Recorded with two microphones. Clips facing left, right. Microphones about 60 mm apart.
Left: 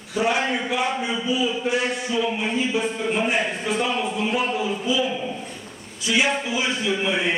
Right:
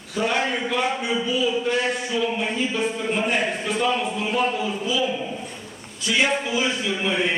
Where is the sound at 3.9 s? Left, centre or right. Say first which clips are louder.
Even; left.